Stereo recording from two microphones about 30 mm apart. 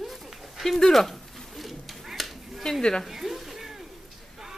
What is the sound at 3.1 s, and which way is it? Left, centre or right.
Stir, centre.